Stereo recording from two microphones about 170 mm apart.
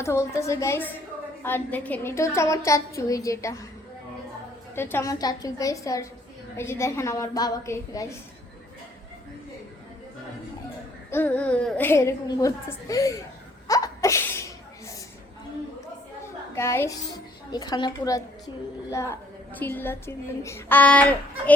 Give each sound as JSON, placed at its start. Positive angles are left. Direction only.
{"t": 0.0, "sound": "a woman's voice", "side_deg": 15}
{"t": 4.7, "sound": "a woman's voice", "side_deg": 15}
{"t": 11.1, "sound": "a woman's voice", "side_deg": 10}
{"t": 13.7, "sound": "a sound", "side_deg": 20}
{"t": 16.6, "sound": "a woman's voice", "side_deg": 15}